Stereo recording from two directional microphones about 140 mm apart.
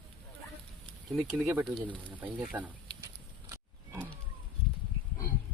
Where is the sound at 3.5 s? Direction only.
15° right (ahead or behind).